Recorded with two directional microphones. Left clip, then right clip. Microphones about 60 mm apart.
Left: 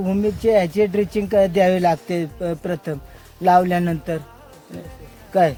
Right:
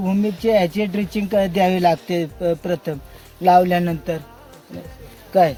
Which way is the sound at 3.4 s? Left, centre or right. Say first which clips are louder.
Right 1 dB; left.